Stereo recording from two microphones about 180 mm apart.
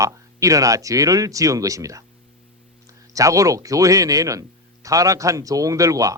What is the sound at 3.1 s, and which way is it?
Speech, 20° right (ahead or behind).